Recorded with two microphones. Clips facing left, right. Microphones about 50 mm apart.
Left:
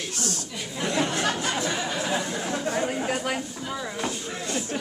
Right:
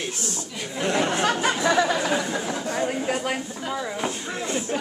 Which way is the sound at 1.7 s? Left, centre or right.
Right.